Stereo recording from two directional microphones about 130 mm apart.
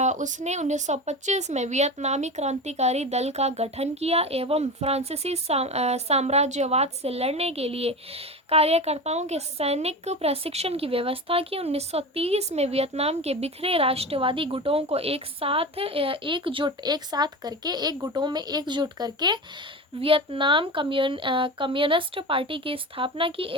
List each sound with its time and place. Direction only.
0.0 s a woman's voice: 70° right (ahead or behind); by 19.4 s 30° right (ahead or behind)
20.0 s a woman's voice: 45° right (ahead or behind)